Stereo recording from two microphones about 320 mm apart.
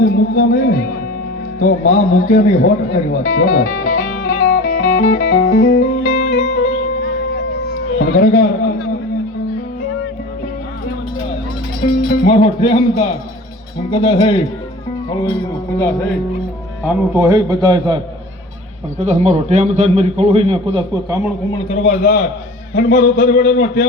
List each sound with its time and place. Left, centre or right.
0.0 s a man's voice: left
8.1 s a sound: left
11.8 s speech: centre
16.8 s a man's voice: centre
21.8 s a man's voice: left